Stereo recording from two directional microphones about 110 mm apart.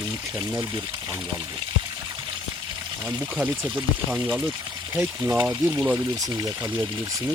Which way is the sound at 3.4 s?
10° right (ahead or behind).